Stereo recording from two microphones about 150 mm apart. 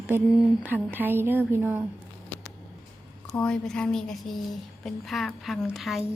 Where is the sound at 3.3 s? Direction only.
5° left (ahead or behind).